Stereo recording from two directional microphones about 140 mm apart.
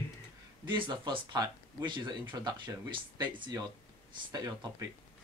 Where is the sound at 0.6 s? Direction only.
35° right (ahead or behind).